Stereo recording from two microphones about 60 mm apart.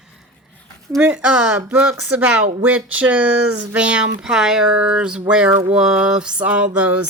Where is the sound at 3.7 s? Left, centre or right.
Centre.